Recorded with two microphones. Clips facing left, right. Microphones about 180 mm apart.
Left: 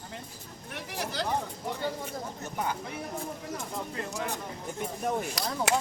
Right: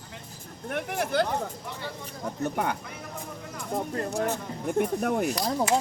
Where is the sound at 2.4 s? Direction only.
60° right (ahead or behind).